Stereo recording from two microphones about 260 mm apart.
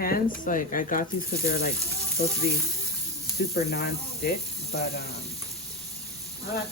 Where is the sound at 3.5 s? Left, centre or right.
Left.